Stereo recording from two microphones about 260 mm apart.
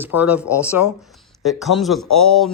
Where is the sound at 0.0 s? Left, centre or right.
Centre.